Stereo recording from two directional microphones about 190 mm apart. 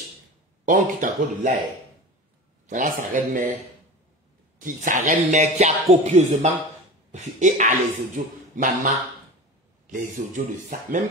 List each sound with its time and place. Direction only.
0.7 s speech: 40° right (ahead or behind)
2.6 s speech: 40° right (ahead or behind)
4.6 s speech: 45° right (ahead or behind)